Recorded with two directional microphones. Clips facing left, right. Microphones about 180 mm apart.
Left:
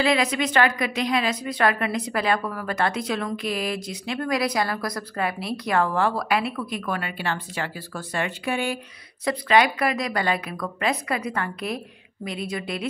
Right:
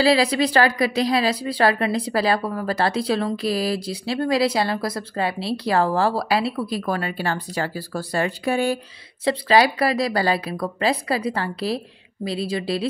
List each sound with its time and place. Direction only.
0.0 s a woman's voice: 35° right (ahead or behind)